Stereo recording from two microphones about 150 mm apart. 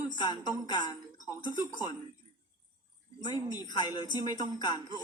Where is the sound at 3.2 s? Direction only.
25° left (ahead or behind).